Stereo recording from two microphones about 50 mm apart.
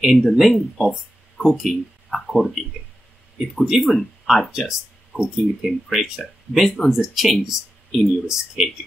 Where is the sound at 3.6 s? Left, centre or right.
Centre.